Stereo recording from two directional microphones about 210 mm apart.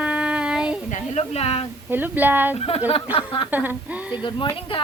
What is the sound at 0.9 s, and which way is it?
Speech, 30° left (ahead or behind).